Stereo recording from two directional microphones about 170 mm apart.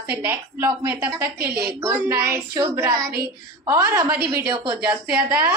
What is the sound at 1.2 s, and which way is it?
Speech, 65° right (ahead or behind).